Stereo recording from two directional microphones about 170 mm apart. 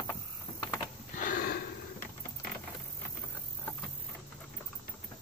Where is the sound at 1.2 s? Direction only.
60° left (ahead or behind).